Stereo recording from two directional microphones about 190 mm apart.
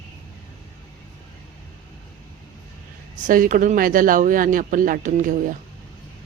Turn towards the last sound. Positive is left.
turn(degrees=-45)  # may be behind; listen again after turning